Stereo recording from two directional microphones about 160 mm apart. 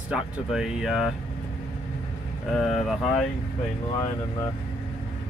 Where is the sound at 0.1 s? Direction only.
5° right (ahead or behind).